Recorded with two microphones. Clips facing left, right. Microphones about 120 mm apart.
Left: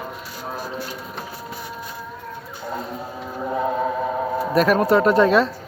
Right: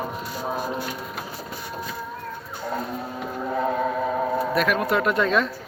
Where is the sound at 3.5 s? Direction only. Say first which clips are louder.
Left 2 dB; 10° left (ahead or behind).